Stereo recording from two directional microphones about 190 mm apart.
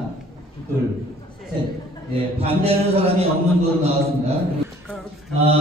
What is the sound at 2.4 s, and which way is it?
Speech, 30° right (ahead or behind).